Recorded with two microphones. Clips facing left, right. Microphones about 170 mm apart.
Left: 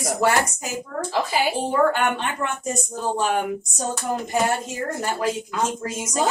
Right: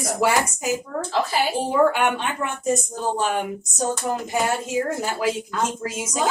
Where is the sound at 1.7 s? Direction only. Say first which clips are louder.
Right 2 dB; 5° right (ahead or behind).